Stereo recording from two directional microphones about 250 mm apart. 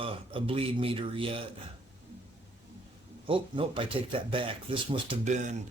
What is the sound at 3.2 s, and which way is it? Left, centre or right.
Speech, right.